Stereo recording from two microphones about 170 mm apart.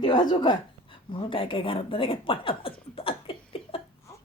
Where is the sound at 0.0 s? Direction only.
25° left (ahead or behind).